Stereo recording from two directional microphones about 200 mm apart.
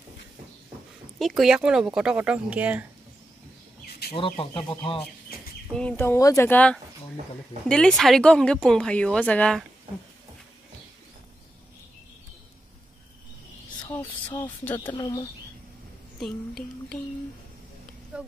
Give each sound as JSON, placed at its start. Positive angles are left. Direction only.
{"t": 1.2, "sound": "speech", "side_deg": 0}
{"t": 4.1, "sound": "speech", "side_deg": 25}
{"t": 5.8, "sound": "speech", "side_deg": 10}
{"t": 13.8, "sound": "a sound", "side_deg": 15}
{"t": 14.6, "sound": "speech", "side_deg": 10}
{"t": 14.9, "sound": "speech", "side_deg": 20}
{"t": 16.2, "sound": "speech", "side_deg": 5}
{"t": 18.1, "sound": "speech", "side_deg": -5}